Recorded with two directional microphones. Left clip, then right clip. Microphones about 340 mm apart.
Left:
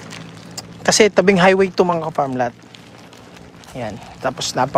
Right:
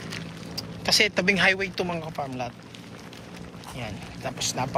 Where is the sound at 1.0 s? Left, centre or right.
Centre.